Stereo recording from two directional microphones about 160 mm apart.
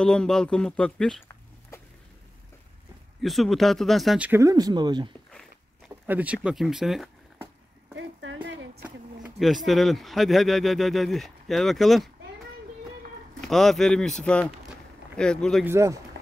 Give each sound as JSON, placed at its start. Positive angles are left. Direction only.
{"t": 0.0, "sound": "speech", "side_deg": 5}
{"t": 1.7, "sound": "a sound", "side_deg": 15}
{"t": 3.2, "sound": "speech", "side_deg": 0}
{"t": 4.3, "sound": "speech", "side_deg": -20}
{"t": 6.0, "sound": "speech", "side_deg": -10}
{"t": 8.4, "sound": "speech", "side_deg": -10}
{"t": 13.5, "sound": "speech", "side_deg": 0}
{"t": 15.6, "sound": "speech", "side_deg": -15}